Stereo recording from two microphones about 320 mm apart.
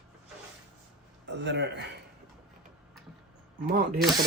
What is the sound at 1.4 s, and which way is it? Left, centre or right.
Speech, right.